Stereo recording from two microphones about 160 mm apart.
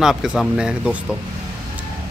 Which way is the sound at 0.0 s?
5° right (ahead or behind).